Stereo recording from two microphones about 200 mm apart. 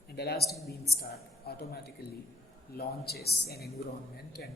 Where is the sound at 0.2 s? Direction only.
55° left (ahead or behind).